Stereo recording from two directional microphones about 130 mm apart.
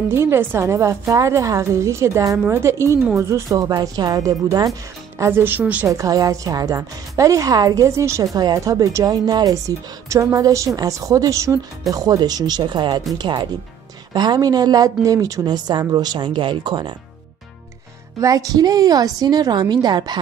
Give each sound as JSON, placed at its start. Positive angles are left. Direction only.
{"t": 0.1, "sound": "a woman's voice", "side_deg": -20}
{"t": 5.2, "sound": "a woman's voice", "side_deg": -15}
{"t": 5.9, "sound": "a woman's voice", "side_deg": -25}
{"t": 18.2, "sound": "a woman's voice", "side_deg": -30}